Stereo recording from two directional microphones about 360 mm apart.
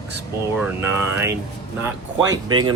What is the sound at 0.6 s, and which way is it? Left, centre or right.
Speech, centre.